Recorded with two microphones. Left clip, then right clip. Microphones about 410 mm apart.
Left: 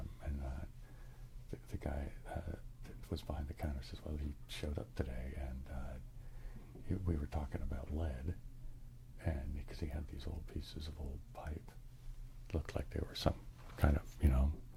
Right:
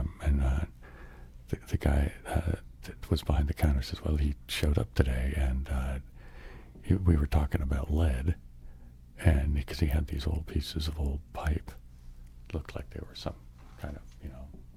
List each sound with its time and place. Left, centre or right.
0.2 s a sound: right
1.5 s speech: right
12.5 s speech: centre
13.7 s speech: left